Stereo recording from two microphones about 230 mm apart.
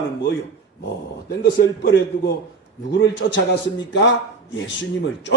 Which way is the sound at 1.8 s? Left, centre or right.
Left.